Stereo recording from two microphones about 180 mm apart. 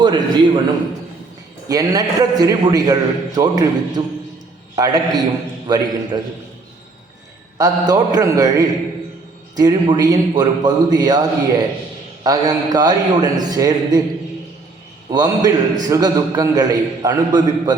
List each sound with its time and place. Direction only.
0.0 s a man's voice: 25° right (ahead or behind)
1.6 s a man's voice: 20° right (ahead or behind)
7.6 s a man's voice: 20° right (ahead or behind)
12.2 s a man's voice: 20° right (ahead or behind)
15.1 s a man's voice: 20° right (ahead or behind)